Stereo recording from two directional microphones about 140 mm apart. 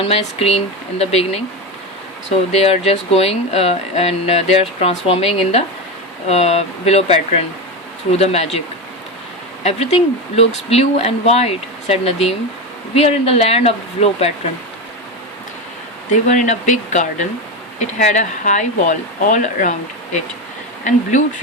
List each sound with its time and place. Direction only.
0.0 s speech: 45° left (ahead or behind)
2.5 s speech: 50° left (ahead or behind)
9.6 s speech: 50° left (ahead or behind)
16.2 s speech: 60° left (ahead or behind)
20.9 s speech: 60° left (ahead or behind)